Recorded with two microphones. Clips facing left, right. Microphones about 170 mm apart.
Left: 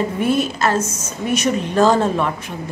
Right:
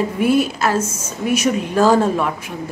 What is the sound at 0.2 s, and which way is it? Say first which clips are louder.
A woman's voice: right 3 dB; 5° right (ahead or behind).